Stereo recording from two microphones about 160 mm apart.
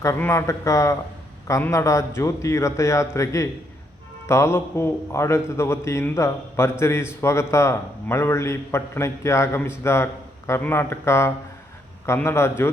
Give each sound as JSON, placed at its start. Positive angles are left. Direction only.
{"t": 0.0, "sound": "a man's voice", "side_deg": 15}